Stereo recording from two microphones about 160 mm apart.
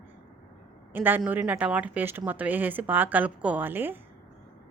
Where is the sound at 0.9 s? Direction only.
10° right (ahead or behind).